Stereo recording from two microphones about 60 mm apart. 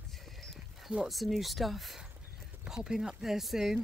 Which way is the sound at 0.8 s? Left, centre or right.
Centre.